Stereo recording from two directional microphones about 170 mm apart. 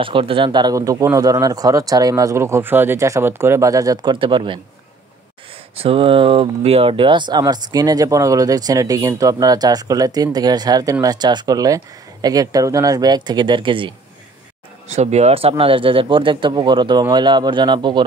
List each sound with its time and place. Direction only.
0.0 s speech: 30° right (ahead or behind)
5.8 s speech: 35° right (ahead or behind)
14.9 s speech: 40° right (ahead or behind)